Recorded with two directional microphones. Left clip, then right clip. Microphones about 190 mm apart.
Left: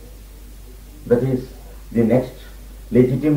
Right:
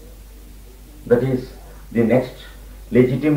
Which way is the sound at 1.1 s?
25° left (ahead or behind).